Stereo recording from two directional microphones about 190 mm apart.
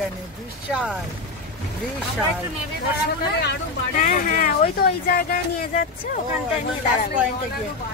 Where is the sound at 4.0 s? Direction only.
45° left (ahead or behind).